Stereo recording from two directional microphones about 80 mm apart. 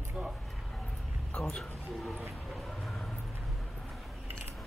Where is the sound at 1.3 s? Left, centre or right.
Centre.